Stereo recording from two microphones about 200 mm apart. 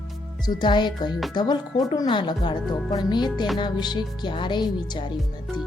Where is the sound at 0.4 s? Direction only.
20° left (ahead or behind).